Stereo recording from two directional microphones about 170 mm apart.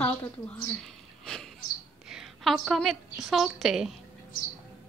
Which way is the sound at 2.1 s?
Centre (ahead or behind).